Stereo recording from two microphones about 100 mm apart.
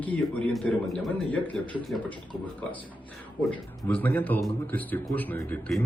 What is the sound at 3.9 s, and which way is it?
A man's voice, 20° left (ahead or behind).